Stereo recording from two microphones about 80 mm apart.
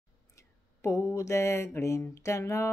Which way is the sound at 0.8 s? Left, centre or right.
Left.